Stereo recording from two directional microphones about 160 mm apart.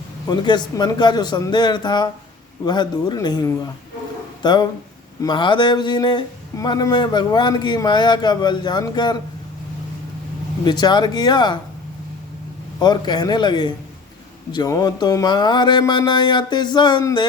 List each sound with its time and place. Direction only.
0.3 s speech: 25° left (ahead or behind)
10.7 s speech: 25° left (ahead or behind)
12.8 s speech: 25° left (ahead or behind)